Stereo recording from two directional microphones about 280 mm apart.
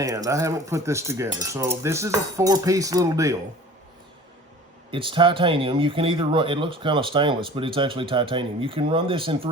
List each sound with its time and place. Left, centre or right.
0.0 s speech: centre
4.9 s speech: centre